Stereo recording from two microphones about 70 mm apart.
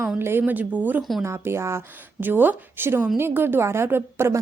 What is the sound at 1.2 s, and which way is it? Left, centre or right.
A woman's voice, right.